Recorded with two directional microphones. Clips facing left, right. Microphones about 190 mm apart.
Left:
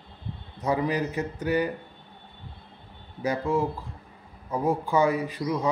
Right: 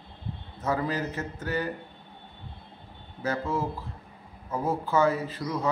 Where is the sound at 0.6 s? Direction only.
15° left (ahead or behind).